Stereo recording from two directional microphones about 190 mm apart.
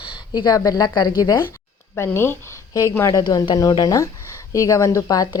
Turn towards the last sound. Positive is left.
turn(degrees=20)  # may be behind; listen again after turning